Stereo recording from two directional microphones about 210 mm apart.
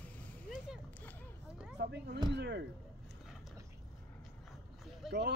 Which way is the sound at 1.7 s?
50° right (ahead or behind).